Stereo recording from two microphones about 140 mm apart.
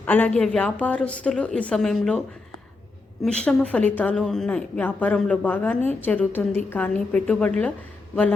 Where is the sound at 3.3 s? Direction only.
5° left (ahead or behind).